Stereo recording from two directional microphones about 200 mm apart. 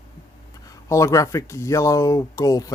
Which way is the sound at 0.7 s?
15° left (ahead or behind).